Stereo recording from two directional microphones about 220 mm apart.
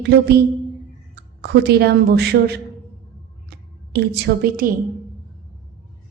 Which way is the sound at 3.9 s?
45° right (ahead or behind).